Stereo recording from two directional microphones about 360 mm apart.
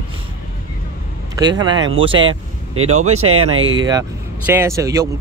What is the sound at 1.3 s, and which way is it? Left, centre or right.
Speech, centre.